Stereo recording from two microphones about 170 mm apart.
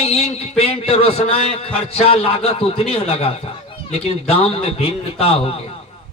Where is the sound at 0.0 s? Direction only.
35° left (ahead or behind).